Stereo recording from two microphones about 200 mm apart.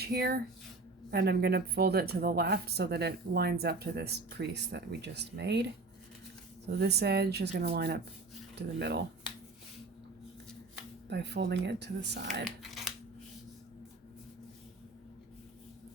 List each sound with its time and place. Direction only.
0.0 s speech: 55° right (ahead or behind)
6.7 s speech: 55° right (ahead or behind)
11.1 s speech: 60° right (ahead or behind)
12.5 s a sound: centre (ahead or behind)